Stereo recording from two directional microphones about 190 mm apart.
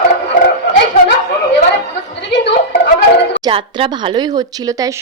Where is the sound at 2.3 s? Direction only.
65° left (ahead or behind).